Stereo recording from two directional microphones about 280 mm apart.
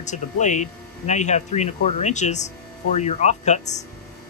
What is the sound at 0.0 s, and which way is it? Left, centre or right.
Speech, left.